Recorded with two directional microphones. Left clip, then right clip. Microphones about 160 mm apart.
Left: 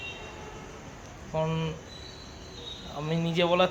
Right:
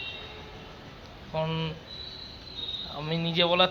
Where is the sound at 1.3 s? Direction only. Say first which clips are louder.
Left 1 dB; 5° left (ahead or behind).